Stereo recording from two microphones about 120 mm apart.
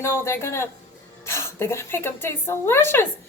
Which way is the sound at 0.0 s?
25° left (ahead or behind).